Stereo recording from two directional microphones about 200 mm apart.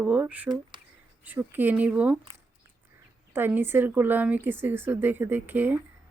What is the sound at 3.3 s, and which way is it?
Speech, 10° right (ahead or behind).